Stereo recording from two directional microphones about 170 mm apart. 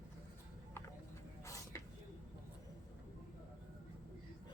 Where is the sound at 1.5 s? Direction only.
15° left (ahead or behind).